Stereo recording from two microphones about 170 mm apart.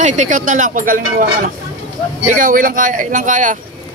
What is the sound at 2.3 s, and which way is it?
Speech, 55° right (ahead or behind).